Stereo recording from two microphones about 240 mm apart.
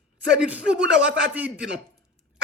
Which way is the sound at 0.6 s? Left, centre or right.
Right.